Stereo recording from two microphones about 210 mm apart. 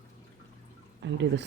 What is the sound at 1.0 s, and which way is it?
Speech, 60° right (ahead or behind).